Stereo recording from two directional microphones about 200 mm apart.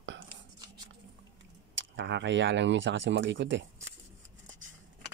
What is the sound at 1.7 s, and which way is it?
Speech, 65° right (ahead or behind).